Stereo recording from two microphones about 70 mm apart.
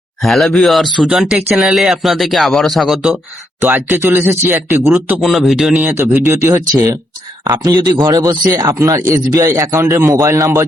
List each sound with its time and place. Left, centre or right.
0.2 s speech: centre
3.6 s speech: right
5.2 s speech: centre
5.9 s speech: right
7.4 s speech: right
10.1 s a man's voice: right